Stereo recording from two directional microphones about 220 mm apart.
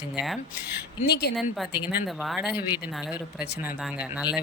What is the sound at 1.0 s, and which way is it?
Speech, 50° left (ahead or behind).